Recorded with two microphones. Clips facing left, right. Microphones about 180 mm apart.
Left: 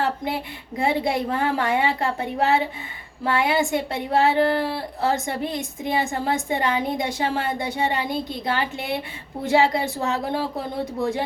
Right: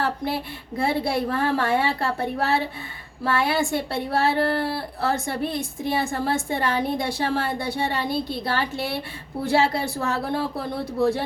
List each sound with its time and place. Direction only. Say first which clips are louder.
0.0 s speech: left 1 dB; 20° left (ahead or behind)